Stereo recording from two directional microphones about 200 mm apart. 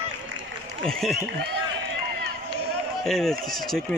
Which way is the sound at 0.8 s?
Centre (ahead or behind).